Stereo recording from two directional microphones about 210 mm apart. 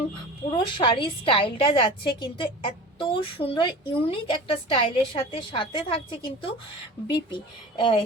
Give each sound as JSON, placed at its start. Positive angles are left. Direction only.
{"t": 0.5, "sound": "a woman's voice", "side_deg": 25}